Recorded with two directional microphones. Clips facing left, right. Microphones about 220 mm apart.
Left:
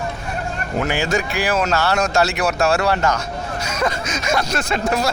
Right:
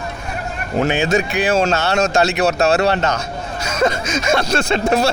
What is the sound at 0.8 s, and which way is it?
Speech, 20° right (ahead or behind).